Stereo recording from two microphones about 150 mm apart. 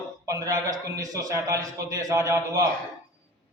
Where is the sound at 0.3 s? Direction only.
20° right (ahead or behind).